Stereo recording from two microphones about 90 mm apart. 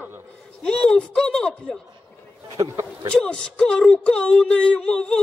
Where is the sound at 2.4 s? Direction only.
40° right (ahead or behind).